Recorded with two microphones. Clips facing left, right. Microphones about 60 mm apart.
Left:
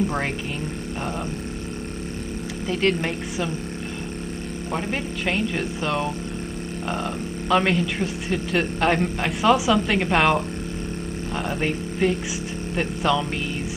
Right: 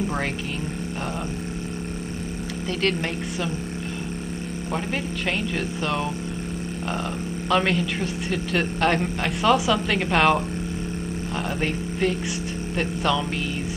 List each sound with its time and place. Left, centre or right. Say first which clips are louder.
2.8 s speech: left 2 dB; centre
4.7 s a man's voice: left 1 dB; centre
7.4 s a man's voice: left 2 dB; centre
11.6 s a man's voice: left 2 dB; centre